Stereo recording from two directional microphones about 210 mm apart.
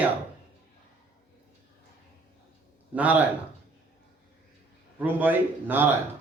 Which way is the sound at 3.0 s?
5° right (ahead or behind).